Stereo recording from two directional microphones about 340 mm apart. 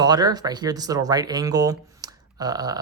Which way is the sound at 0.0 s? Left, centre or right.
Centre.